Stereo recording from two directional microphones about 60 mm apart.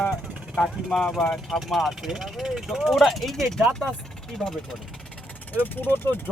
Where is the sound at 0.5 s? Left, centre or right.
Centre.